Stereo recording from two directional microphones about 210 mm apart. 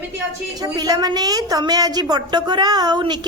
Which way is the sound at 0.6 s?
20° right (ahead or behind).